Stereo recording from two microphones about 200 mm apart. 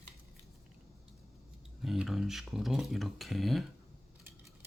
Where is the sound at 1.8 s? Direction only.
Centre (ahead or behind).